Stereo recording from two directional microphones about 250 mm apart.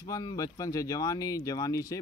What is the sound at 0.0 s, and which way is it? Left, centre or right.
Speech, centre.